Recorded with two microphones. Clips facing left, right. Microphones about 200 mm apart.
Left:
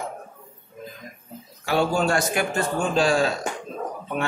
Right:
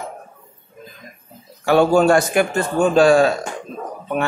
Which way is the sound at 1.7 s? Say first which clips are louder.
Right 8 dB; 55° right (ahead or behind).